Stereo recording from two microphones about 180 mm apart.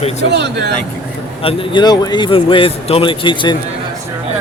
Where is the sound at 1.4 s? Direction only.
30° left (ahead or behind).